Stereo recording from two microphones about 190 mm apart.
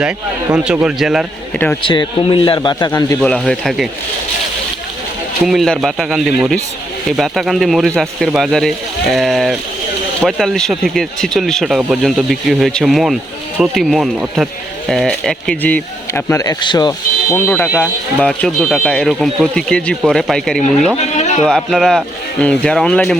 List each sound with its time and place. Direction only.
0.5 s speech: 5° right (ahead or behind)
1.5 s speech: 10° left (ahead or behind)
1.8 s a man's voice: 25° left (ahead or behind)
3.2 s speech: 5° left (ahead or behind)
5.5 s speech: centre (ahead or behind); by 16.9 s 25° left (ahead or behind)
17.3 s speech: 10° left (ahead or behind)
21.0 s a sound: 35° left (ahead or behind)
21.4 s speech: centre (ahead or behind)